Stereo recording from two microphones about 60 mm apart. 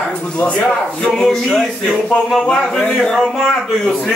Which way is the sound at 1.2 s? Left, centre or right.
Centre.